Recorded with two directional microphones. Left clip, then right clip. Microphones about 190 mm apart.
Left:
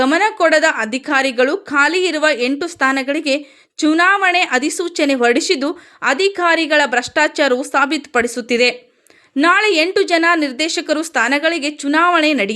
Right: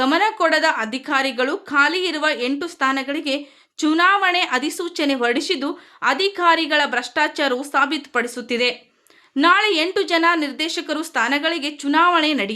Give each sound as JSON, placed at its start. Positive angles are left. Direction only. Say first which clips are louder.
{"t": 0.0, "sound": "a woman's voice", "louder": "left 4 dB", "side_deg": 20}